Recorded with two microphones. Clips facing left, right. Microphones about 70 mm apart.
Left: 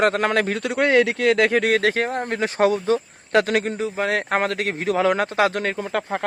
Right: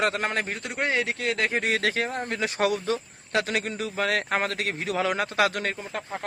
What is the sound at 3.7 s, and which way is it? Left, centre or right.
Speech, left.